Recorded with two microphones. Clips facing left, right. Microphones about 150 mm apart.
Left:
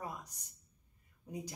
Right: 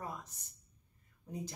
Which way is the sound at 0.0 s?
15° left (ahead or behind).